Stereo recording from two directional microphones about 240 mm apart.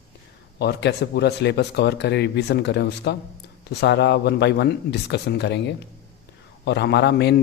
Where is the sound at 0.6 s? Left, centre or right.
Left.